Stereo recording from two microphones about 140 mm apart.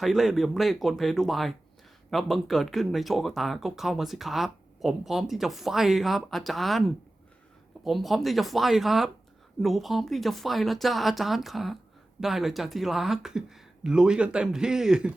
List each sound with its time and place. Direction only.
0.0 s speech: centre (ahead or behind)